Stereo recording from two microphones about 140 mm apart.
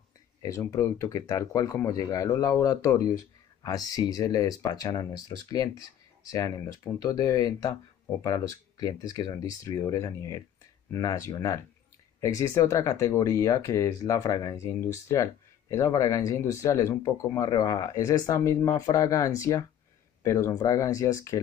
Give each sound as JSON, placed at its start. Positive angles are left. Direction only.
{"t": 0.4, "sound": "speech", "side_deg": 25}